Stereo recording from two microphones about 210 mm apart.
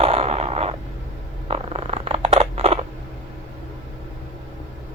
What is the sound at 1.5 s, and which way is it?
Scissors, 30° right (ahead or behind).